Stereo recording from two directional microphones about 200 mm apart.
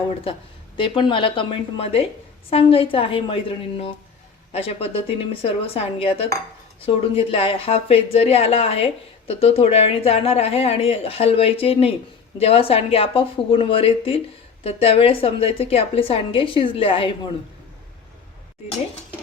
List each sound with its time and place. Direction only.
0.8 s speech: 25° left (ahead or behind)
4.5 s speech: 30° left (ahead or behind)